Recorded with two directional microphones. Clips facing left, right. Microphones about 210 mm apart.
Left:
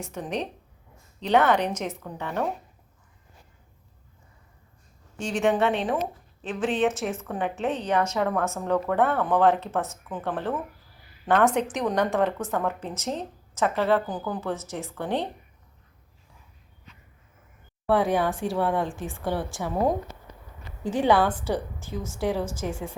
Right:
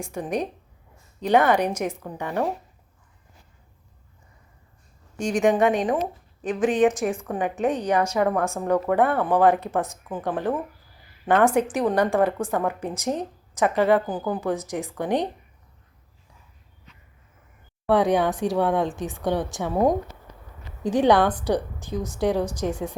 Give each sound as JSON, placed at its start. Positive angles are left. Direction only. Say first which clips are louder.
{"t": 0.0, "sound": "a woman's voice", "louder": "right 4 dB", "side_deg": -10}
{"t": 5.1, "sound": "a woman's voice", "louder": "right 3 dB", "side_deg": -15}
{"t": 17.8, "sound": "a woman's voice", "louder": "right 3 dB", "side_deg": -15}
{"t": 20.8, "sound": "a woman's voice", "louder": "right 3 dB", "side_deg": -15}